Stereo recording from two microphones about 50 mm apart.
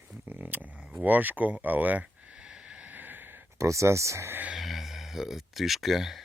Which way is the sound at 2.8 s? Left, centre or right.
Right.